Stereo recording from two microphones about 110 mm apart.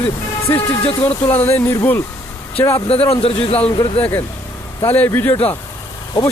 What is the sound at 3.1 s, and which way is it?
Speech, 65° left (ahead or behind).